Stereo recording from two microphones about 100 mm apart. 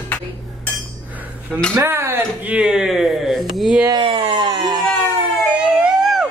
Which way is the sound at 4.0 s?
55° right (ahead or behind).